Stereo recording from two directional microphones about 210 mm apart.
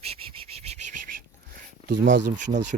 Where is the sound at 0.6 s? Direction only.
30° right (ahead or behind).